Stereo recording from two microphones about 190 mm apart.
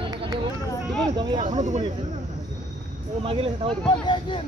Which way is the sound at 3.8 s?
25° left (ahead or behind).